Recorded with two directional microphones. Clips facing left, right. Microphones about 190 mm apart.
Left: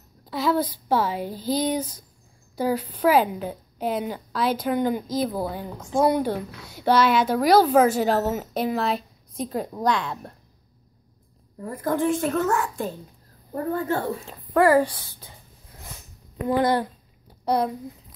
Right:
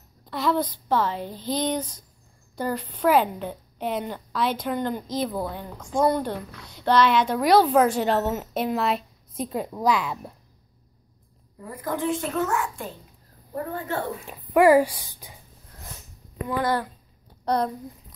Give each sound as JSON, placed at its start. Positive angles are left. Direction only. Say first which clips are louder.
{"t": 0.2, "sound": "a woman's voice", "louder": "left 1 dB", "side_deg": 5}
{"t": 11.6, "sound": "a child's voice", "louder": "left 4 dB", "side_deg": 50}
{"t": 14.2, "sound": "speech", "louder": "right 3 dB", "side_deg": -15}
{"t": 16.6, "sound": "speech", "louder": "even", "side_deg": 20}